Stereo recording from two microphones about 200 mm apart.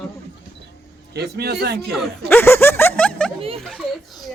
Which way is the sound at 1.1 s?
55° right (ahead or behind).